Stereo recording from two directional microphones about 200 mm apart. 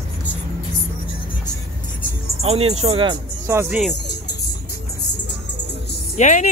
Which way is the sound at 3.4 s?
10° right (ahead or behind).